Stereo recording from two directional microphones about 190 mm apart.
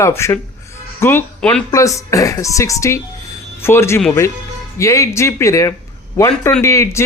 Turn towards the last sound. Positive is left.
turn(degrees=15)  # may be behind; listen again after turning